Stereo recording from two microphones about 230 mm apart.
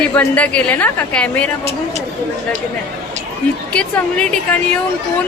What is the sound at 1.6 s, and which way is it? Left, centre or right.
Speech, right.